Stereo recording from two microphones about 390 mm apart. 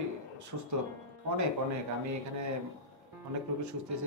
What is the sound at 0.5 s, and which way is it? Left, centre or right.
Speech, right.